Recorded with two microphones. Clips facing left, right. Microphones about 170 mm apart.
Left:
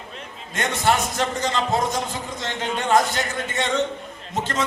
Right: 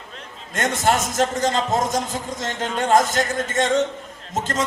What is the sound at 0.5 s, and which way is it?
A man's voice, 45° right (ahead or behind).